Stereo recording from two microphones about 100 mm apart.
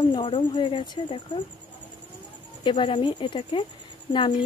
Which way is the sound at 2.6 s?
55° left (ahead or behind).